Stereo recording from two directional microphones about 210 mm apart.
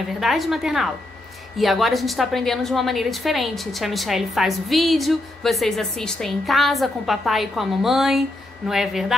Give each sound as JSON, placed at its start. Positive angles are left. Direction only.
{"t": 0.2, "sound": "a woman's voice", "side_deg": 0}